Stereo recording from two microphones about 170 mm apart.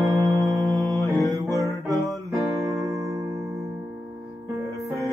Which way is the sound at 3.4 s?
Centre (ahead or behind).